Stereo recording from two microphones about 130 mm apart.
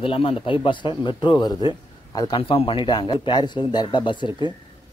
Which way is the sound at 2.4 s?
45° left (ahead or behind).